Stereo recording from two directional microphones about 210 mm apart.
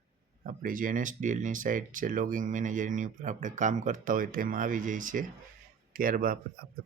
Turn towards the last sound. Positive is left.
turn(degrees=-45)  # may be behind; listen again after turning